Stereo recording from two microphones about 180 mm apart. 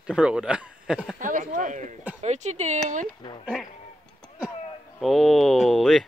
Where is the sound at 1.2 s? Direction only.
45° right (ahead or behind).